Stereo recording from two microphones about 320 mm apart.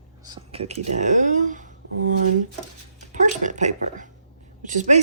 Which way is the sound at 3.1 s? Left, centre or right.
Right.